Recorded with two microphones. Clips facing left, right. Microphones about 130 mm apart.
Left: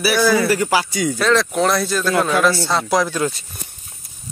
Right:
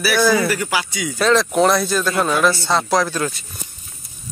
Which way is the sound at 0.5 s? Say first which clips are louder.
Left 4 dB; 30° left (ahead or behind).